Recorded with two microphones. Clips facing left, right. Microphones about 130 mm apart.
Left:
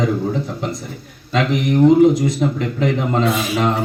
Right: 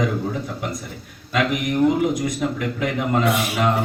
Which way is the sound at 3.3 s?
65° right (ahead or behind).